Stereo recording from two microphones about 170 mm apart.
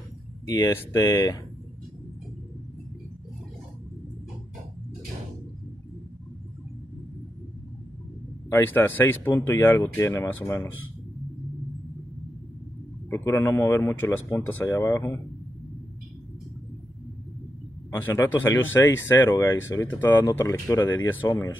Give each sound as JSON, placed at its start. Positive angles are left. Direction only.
{"t": 0.5, "sound": "speech", "side_deg": 20}
{"t": 8.5, "sound": "speech", "side_deg": 15}
{"t": 13.1, "sound": "speech", "side_deg": 15}
{"t": 17.9, "sound": "speech", "side_deg": 10}
{"t": 21.2, "sound": "speech", "side_deg": 25}